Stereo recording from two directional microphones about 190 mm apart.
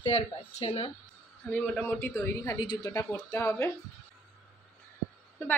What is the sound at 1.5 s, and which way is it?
A woman's voice, 10° left (ahead or behind).